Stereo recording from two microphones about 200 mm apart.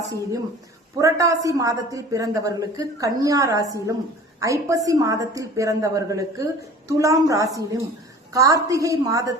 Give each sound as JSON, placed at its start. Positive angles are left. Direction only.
{"t": 0.1, "sound": "a woman's voice", "side_deg": -15}